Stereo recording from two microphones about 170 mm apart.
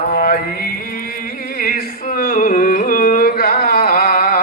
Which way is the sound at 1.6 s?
60° left (ahead or behind).